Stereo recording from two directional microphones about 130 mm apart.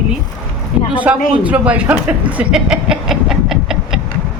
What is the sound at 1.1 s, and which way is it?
Speech, 10° right (ahead or behind).